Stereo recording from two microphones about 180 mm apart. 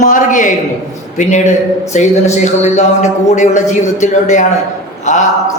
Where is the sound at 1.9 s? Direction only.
40° left (ahead or behind).